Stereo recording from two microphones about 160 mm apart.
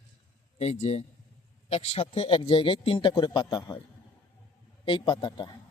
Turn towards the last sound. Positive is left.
turn(degrees=30)  # may be behind; listen again after turning